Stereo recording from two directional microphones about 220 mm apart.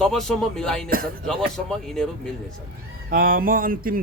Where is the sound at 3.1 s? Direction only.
40° right (ahead or behind).